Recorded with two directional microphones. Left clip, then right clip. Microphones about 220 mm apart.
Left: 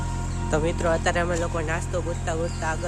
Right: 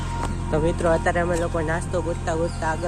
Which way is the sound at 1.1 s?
15° left (ahead or behind).